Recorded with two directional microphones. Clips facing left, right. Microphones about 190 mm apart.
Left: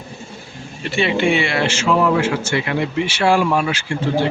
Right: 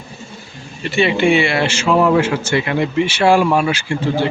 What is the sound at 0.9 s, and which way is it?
Speech, centre (ahead or behind).